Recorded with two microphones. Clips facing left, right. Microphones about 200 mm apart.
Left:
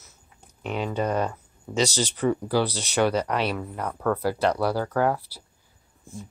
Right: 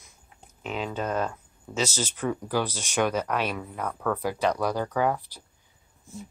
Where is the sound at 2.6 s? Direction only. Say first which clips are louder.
Left 4 dB; 10° right (ahead or behind).